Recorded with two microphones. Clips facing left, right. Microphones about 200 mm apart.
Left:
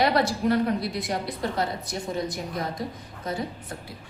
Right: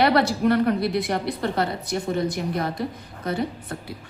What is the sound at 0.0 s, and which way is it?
A woman's voice, 65° right (ahead or behind).